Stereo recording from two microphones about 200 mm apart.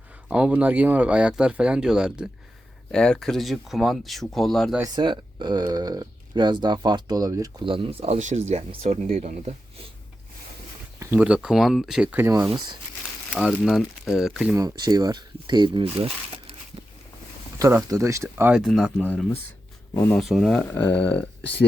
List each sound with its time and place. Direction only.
0.3 s speech: 5° right (ahead or behind)
4.8 s speech: 20° right (ahead or behind)
11.0 s speech: 10° right (ahead or behind)
12.5 s speech: 20° right (ahead or behind)
13.3 s speech: centre (ahead or behind)
14.5 s speech: 20° right (ahead or behind)
17.6 s speech: 15° right (ahead or behind); by 20.2 s 10° left (ahead or behind)
20.2 s speech: centre (ahead or behind)